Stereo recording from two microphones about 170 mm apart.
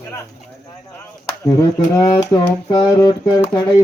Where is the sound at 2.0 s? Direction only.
25° left (ahead or behind).